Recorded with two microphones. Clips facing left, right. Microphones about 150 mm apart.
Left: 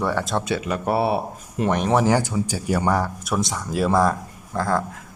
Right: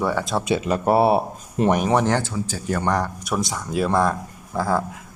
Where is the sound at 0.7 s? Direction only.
35° right (ahead or behind).